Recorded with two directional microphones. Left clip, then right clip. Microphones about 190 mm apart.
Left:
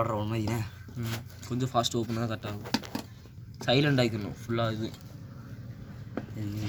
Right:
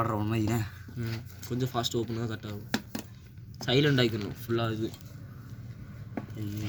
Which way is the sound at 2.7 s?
30° right (ahead or behind).